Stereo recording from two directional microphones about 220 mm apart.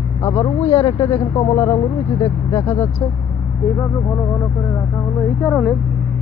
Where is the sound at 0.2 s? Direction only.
20° left (ahead or behind).